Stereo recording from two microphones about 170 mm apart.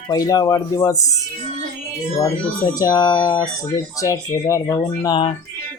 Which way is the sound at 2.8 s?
20° left (ahead or behind).